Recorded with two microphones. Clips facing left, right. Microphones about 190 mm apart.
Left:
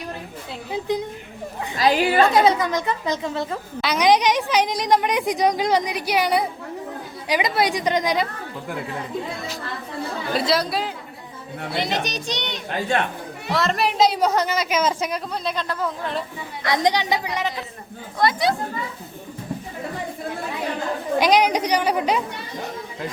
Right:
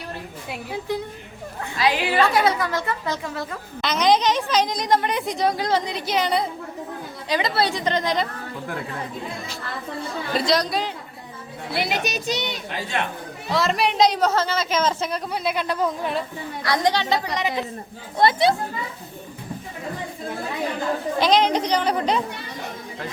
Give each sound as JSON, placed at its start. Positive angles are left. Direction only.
{"t": 0.7, "sound": "a woman's voice", "side_deg": 20}
{"t": 1.8, "sound": "a woman's voice", "side_deg": 40}
{"t": 2.3, "sound": "a woman's voice", "side_deg": 20}
{"t": 3.8, "sound": "a woman's voice", "side_deg": 10}
{"t": 10.3, "sound": "speech", "side_deg": 5}
{"t": 11.8, "sound": "a woman's voice", "side_deg": -10}
{"t": 15.3, "sound": "speech", "side_deg": -10}
{"t": 16.6, "sound": "a woman's voice", "side_deg": 20}
{"t": 18.2, "sound": "speech", "side_deg": -25}
{"t": 21.2, "sound": "a woman's voice", "side_deg": 10}